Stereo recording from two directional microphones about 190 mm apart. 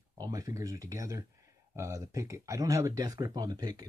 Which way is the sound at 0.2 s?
20° right (ahead or behind).